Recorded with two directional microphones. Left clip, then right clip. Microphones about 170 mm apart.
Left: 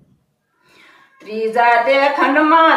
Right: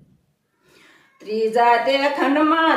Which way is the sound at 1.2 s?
25° right (ahead or behind).